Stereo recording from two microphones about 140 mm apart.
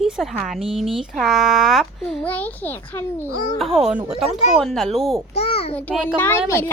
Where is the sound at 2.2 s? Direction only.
10° left (ahead or behind).